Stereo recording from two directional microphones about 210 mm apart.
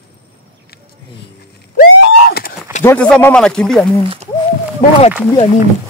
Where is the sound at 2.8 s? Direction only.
10° left (ahead or behind).